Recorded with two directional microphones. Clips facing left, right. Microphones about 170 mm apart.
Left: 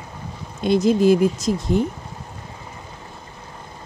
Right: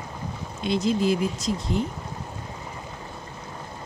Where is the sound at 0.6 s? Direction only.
45° left (ahead or behind).